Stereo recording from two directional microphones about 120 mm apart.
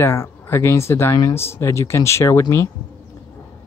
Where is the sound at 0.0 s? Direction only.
20° left (ahead or behind).